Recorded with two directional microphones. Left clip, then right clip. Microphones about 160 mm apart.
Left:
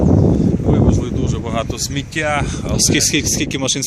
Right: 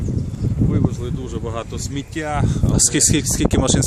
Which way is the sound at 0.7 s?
55° left (ahead or behind).